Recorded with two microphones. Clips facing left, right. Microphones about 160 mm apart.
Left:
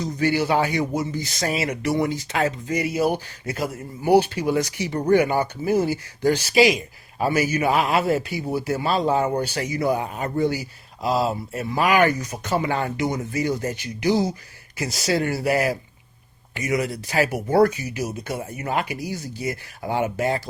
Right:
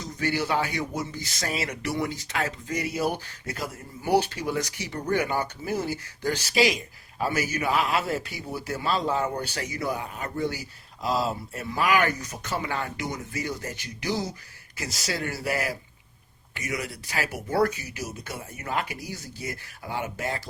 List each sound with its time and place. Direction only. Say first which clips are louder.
0.0 s speech: left 6 dB; 10° left (ahead or behind)
4.9 s speech: left 8 dB; 35° left (ahead or behind)
5.1 s speech: left 7 dB; 10° left (ahead or behind)